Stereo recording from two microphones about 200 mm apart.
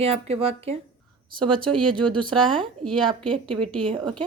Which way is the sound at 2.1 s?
25° right (ahead or behind).